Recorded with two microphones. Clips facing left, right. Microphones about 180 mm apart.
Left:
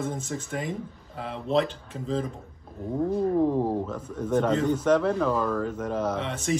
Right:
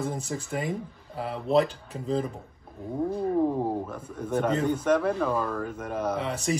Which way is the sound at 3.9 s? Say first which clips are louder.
Left 4 dB; 10° right (ahead or behind).